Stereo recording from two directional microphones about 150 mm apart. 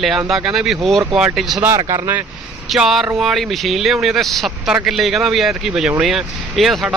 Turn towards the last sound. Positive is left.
turn(degrees=0)  # may be behind; listen again after turning